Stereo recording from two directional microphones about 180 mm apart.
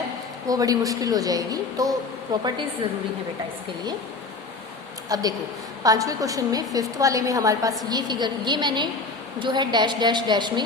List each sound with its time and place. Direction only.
0.4 s a woman's voice: 20° right (ahead or behind)
5.0 s a woman's voice: 20° right (ahead or behind)